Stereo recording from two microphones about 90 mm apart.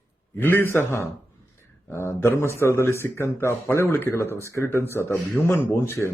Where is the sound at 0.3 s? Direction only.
25° left (ahead or behind).